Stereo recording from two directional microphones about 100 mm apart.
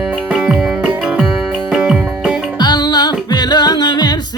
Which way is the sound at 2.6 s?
45° left (ahead or behind).